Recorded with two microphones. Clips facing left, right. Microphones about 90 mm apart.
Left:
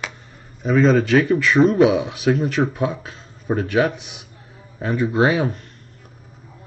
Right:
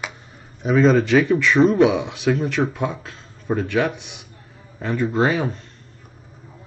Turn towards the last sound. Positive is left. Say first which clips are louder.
# left 2 dB
turn(degrees=10)  # may be behind; listen again after turning